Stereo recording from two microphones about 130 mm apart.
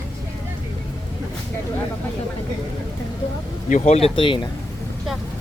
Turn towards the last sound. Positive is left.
turn(degrees=40)  # may be behind; listen again after turning